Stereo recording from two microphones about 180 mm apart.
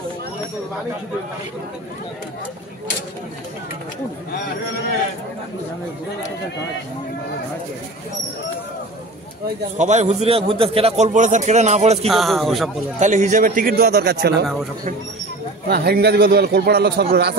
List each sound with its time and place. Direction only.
9.8 s a man's voice: 40° right (ahead or behind)
12.1 s speech: centre (ahead or behind)
13.0 s a man's voice: 40° right (ahead or behind); by 14.3 s 65° right (ahead or behind)
15.7 s a man's voice: 60° right (ahead or behind)